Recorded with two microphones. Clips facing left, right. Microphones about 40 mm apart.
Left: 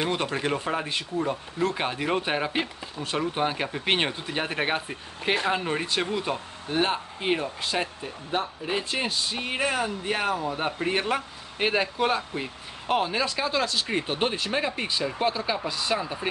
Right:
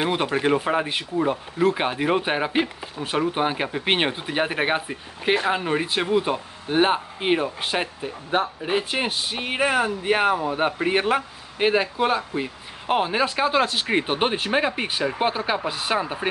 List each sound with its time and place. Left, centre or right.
0.0 s speech: centre
11.5 s speech: centre; by 16.3 s right